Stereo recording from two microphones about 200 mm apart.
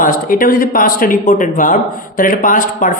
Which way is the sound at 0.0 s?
45° left (ahead or behind).